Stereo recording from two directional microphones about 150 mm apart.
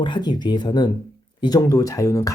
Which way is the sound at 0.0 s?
30° left (ahead or behind).